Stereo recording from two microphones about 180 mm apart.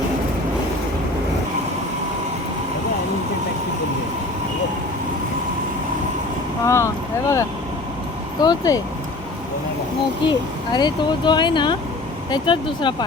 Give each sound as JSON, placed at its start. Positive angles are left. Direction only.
{"t": 6.7, "sound": "boat", "side_deg": 15}
{"t": 8.4, "sound": "speech", "side_deg": 20}
{"t": 10.2, "sound": "speech", "side_deg": 25}